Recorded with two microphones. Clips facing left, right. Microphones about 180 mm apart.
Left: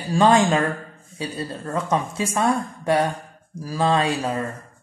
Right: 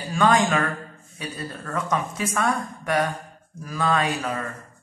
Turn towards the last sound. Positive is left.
turn(degrees=30)  # may be behind; listen again after turning